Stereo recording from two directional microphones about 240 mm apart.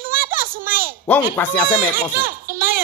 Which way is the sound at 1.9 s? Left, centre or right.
Right.